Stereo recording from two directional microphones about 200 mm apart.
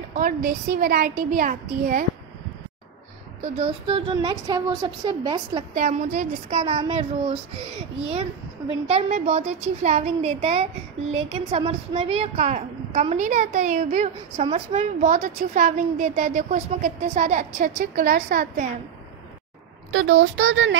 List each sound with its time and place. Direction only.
0.1 s a woman's voice: 45° right (ahead or behind)
3.5 s a woman's voice: 25° right (ahead or behind)
5.8 s a woman's voice: 35° right (ahead or behind)
19.9 s speech: 75° right (ahead or behind)